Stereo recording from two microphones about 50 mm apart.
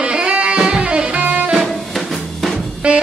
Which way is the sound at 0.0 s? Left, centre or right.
Right.